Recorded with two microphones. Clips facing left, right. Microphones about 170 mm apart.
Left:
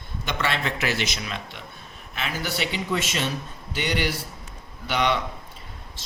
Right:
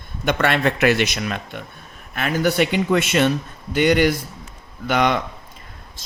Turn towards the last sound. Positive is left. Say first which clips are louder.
# right 5 dB
turn(degrees=-50)  # may be behind; listen again after turning